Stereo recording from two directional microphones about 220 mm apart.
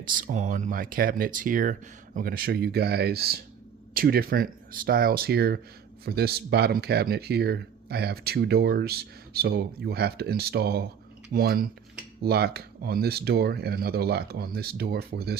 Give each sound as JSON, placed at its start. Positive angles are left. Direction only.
{"t": 0.1, "sound": "speech", "side_deg": -40}